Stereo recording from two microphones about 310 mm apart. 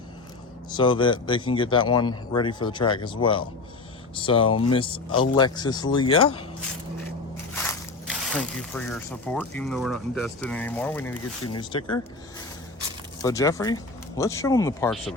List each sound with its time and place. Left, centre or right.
0.8 s speech: centre
7.5 s crushing: centre
8.1 s speech: centre
13.2 s speech: centre